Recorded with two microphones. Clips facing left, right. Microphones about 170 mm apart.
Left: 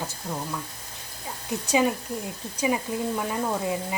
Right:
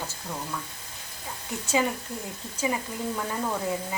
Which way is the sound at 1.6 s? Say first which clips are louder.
Left 3 dB; 15° left (ahead or behind).